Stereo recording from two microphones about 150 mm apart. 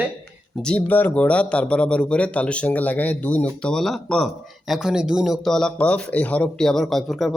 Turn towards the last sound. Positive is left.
turn(degrees=0)  # may be behind; listen again after turning